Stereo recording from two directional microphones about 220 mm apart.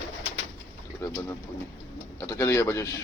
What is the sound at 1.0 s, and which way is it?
Speech, 15° left (ahead or behind).